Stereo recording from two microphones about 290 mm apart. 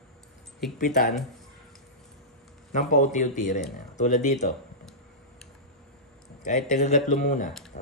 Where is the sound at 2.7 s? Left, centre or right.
Left.